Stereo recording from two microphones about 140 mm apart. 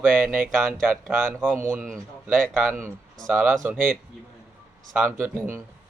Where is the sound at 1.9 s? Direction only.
Centre (ahead or behind).